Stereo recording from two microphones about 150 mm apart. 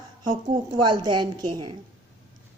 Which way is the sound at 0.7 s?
30° right (ahead or behind).